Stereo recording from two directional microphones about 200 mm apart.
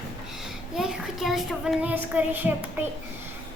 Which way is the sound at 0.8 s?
Centre (ahead or behind).